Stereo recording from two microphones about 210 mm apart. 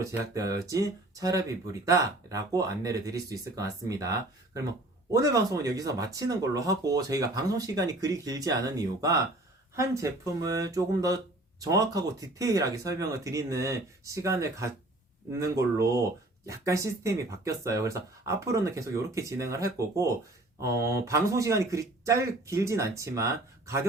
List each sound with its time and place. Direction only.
0.0 s speech: 15° right (ahead or behind)